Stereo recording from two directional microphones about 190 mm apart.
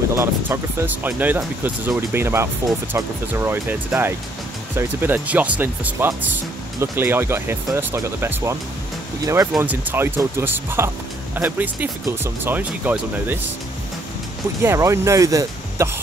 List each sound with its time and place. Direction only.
0.1 s speech: 15° right (ahead or behind)
14.6 s speech: 15° right (ahead or behind)